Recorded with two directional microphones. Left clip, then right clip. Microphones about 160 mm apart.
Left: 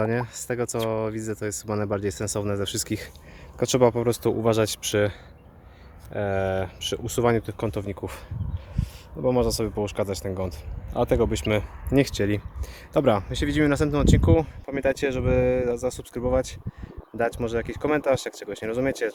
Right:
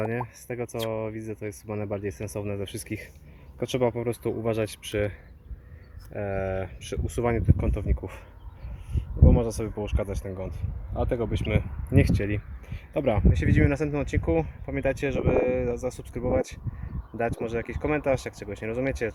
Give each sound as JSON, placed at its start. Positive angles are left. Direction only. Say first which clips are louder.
{"t": 0.0, "sound": "speech", "louder": "left 4 dB", "side_deg": 25}
{"t": 6.1, "sound": "speech", "louder": "left 4 dB", "side_deg": 20}
{"t": 9.2, "sound": "speech", "louder": "left 4 dB", "side_deg": 20}
{"t": 13.3, "sound": "speech", "louder": "left 3 dB", "side_deg": 15}